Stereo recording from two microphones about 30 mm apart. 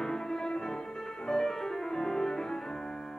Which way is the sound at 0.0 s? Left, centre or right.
Centre.